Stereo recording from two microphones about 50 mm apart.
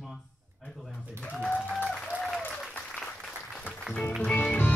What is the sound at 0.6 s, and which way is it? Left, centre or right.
Speech, left.